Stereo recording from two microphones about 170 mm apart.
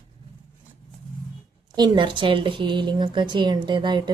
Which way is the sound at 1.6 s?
25° right (ahead or behind).